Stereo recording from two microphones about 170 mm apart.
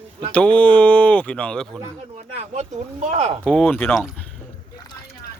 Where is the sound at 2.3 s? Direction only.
40° right (ahead or behind).